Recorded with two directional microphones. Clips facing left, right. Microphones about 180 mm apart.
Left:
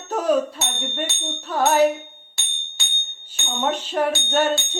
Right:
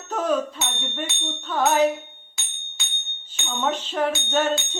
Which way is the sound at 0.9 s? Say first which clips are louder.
Left 2 dB; 10° left (ahead or behind).